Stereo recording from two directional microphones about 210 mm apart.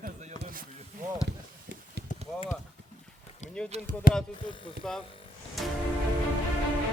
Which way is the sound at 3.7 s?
30° right (ahead or behind).